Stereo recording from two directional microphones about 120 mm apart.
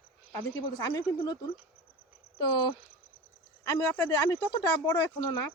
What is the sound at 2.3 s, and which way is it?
Speech, 40° left (ahead or behind).